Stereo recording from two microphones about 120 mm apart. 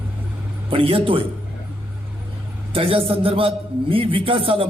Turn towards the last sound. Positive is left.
turn(degrees=-50)  # may be behind; listen again after turning